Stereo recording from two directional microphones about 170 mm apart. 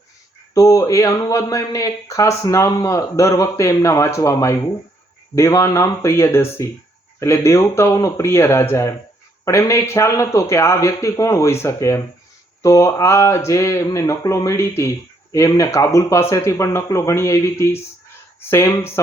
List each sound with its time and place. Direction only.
0.5 s speech: 20° left (ahead or behind)